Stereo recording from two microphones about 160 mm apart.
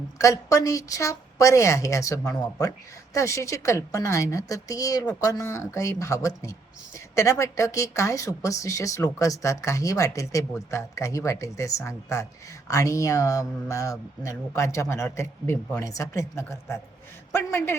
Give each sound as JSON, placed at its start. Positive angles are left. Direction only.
{"t": 0.2, "sound": "speech", "side_deg": 20}